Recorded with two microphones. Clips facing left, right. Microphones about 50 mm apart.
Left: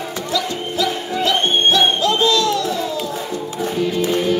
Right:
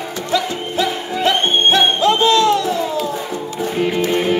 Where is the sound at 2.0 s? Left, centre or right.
Right.